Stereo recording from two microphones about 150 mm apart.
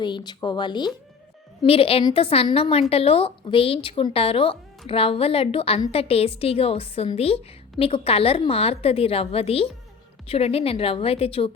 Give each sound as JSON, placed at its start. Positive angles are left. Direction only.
{"t": 0.0, "sound": "a woman's voice", "side_deg": 30}